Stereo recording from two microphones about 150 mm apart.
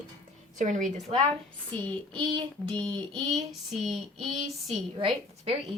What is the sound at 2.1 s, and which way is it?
Child singing, 35° right (ahead or behind).